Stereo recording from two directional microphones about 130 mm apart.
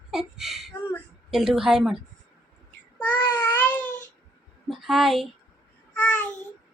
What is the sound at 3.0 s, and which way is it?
Babbling, 15° left (ahead or behind).